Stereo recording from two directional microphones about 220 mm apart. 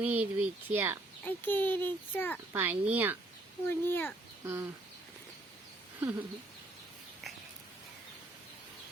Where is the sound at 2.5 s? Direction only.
10° right (ahead or behind).